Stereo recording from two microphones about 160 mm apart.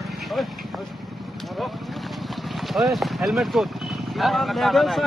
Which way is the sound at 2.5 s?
Centre (ahead or behind).